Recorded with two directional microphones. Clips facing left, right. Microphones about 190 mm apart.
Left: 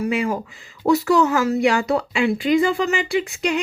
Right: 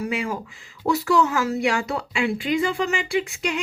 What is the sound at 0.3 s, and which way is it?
Speech, 35° left (ahead or behind).